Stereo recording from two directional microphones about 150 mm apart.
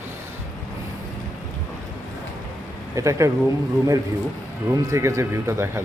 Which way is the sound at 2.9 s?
20° right (ahead or behind).